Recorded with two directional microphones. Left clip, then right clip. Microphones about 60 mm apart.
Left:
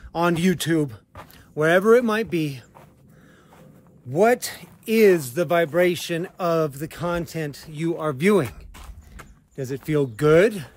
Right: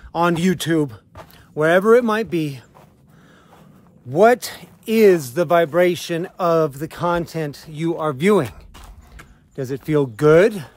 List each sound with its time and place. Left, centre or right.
0.1 s speech: right
4.1 s speech: right
4.6 s speech: right
5.3 s speech: right
5.7 s speech: right
7.7 s speech: right
9.6 s speech: right